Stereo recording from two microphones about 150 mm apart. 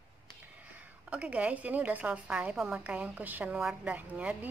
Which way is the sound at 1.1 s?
10° right (ahead or behind).